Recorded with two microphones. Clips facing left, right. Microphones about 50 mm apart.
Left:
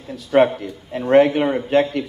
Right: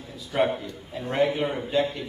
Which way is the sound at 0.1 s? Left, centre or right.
Left.